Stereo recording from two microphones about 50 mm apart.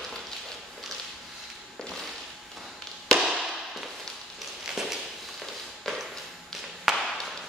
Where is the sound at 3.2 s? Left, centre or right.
Centre.